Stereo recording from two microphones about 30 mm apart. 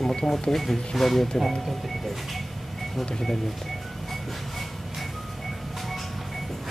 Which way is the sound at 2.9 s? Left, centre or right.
Centre.